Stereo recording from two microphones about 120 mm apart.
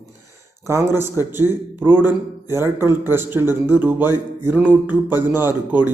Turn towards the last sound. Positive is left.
turn(degrees=-15)  # may be behind; listen again after turning